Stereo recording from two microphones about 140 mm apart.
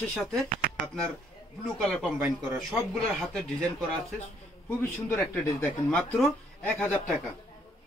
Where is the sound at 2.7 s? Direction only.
Centre (ahead or behind).